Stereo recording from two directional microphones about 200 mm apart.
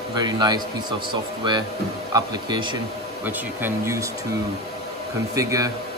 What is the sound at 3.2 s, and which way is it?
Speech, 10° right (ahead or behind).